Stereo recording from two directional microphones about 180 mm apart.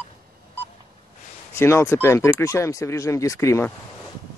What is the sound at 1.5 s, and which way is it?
Speech, 15° left (ahead or behind).